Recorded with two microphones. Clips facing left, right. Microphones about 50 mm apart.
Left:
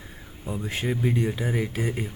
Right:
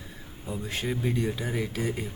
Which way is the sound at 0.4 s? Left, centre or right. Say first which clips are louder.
Left 3 dB; centre.